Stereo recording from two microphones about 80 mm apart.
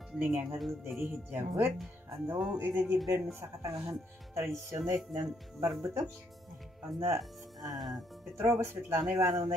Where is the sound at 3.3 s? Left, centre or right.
Right.